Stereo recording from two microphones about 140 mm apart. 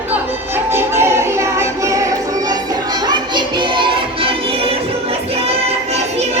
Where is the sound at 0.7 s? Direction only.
15° right (ahead or behind).